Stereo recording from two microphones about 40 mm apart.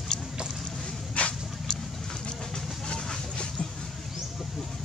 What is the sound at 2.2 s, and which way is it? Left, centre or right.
Vehicle, centre.